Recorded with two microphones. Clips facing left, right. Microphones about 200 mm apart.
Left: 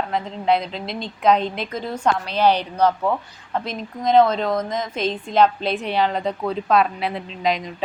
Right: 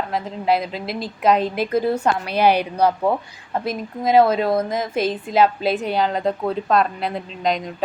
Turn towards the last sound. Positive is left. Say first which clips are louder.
# even
turn(degrees=0)  # may be behind; listen again after turning